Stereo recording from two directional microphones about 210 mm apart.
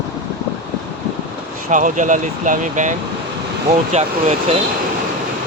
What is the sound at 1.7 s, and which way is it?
Speech, 35° right (ahead or behind).